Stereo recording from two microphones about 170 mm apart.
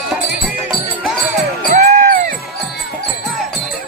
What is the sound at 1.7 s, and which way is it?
Music, 40° right (ahead or behind).